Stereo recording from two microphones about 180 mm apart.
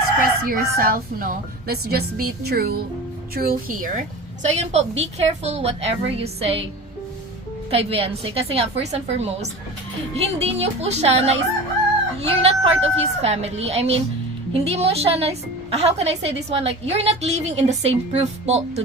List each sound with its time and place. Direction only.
0.2 s a woman's voice: 55° right (ahead or behind); by 6.7 s 35° right (ahead or behind)
7.7 s a woman's voice: 30° right (ahead or behind)